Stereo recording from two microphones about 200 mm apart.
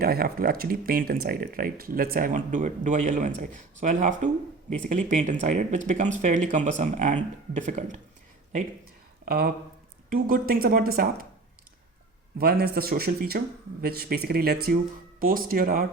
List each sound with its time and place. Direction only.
0.0 s speech: 50° right (ahead or behind)
9.2 s speech: 50° right (ahead or behind)
12.4 s speech: 50° right (ahead or behind)